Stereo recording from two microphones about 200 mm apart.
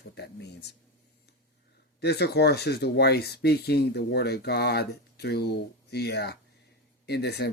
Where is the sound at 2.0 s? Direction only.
55° left (ahead or behind).